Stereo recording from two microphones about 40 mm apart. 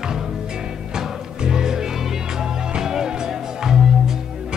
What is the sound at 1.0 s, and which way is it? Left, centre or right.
Music, centre.